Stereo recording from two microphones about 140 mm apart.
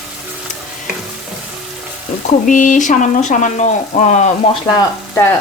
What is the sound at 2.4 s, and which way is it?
Speech, 65° left (ahead or behind).